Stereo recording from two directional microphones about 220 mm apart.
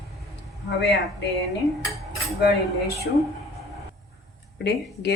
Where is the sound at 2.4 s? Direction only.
45° left (ahead or behind).